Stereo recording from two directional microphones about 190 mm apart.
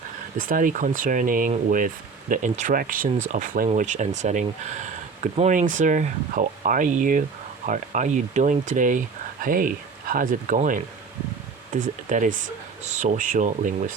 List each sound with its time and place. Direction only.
0.3 s speech: 45° right (ahead or behind)